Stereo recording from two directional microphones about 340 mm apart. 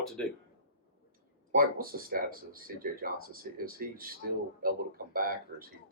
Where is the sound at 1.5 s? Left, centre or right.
Right.